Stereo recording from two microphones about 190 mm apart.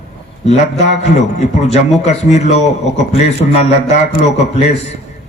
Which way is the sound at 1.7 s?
35° left (ahead or behind).